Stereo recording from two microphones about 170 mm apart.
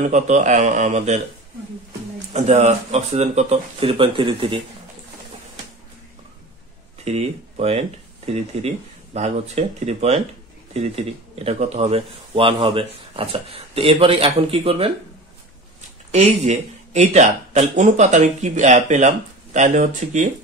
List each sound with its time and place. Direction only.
0.0 s speech: 45° right (ahead or behind)
2.3 s speech: 40° right (ahead or behind)
7.1 s speech: 40° right (ahead or behind)
16.1 s speech: 40° right (ahead or behind)